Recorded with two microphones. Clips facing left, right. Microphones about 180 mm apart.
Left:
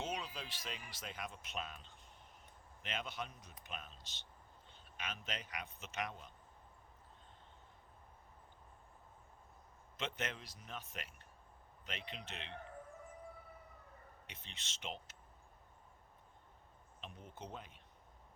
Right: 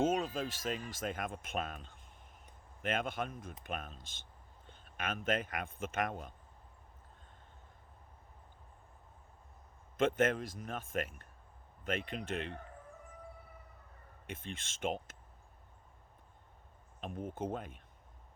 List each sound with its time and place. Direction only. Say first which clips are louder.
0.0 s speech: right 11 dB; 45° right (ahead or behind)
10.0 s speech: right 13 dB; 50° right (ahead or behind)
14.3 s speech: right 15 dB; 50° right (ahead or behind)
17.0 s speech: right 12 dB; 50° right (ahead or behind)